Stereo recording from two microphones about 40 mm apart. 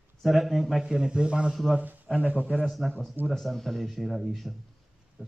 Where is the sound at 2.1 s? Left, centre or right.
Right.